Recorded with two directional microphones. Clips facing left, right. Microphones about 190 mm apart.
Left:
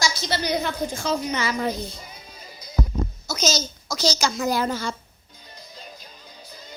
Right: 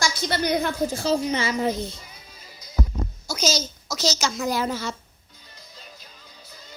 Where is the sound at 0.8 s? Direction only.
35° right (ahead or behind).